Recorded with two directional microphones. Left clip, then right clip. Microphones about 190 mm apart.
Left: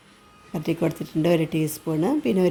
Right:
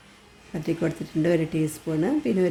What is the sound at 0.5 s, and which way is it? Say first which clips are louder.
Speech: left 2 dB; 20° left (ahead or behind).